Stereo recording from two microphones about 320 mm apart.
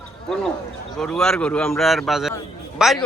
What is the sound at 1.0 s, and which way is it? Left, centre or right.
A man's voice, centre.